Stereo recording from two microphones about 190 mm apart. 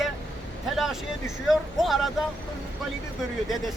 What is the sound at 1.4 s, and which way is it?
Speech, centre (ahead or behind).